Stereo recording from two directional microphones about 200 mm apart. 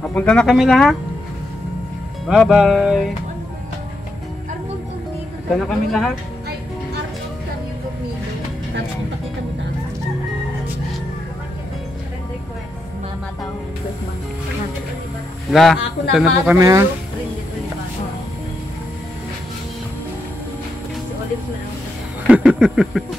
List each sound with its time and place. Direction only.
0.0 s a man's voice: 5° left (ahead or behind)
2.2 s a man's voice: centre (ahead or behind)
5.7 s a man's voice: centre (ahead or behind)
15.5 s a man's voice: centre (ahead or behind)
16.5 s speech: 15° right (ahead or behind)
22.3 s a sound: 5° right (ahead or behind)